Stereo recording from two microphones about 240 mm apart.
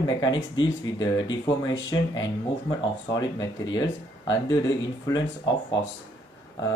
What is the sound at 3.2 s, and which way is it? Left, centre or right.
Speech, centre.